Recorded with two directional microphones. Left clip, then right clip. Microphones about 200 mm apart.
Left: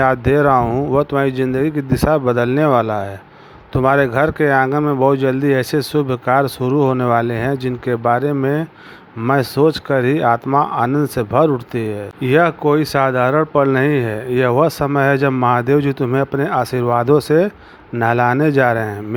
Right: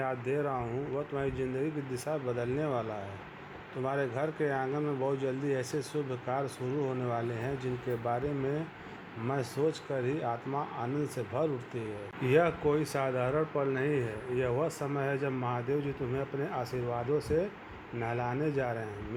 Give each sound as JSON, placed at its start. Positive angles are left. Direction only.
{"t": 0.0, "sound": "speech", "side_deg": 45}